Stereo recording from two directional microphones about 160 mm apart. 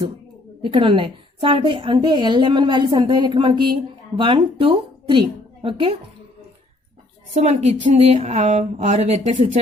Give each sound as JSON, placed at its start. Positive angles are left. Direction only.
{"t": 0.6, "sound": "a woman's voice", "side_deg": -35}
{"t": 7.3, "sound": "speech", "side_deg": -45}